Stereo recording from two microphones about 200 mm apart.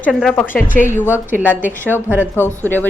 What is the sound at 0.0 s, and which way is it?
A woman's voice, centre (ahead or behind).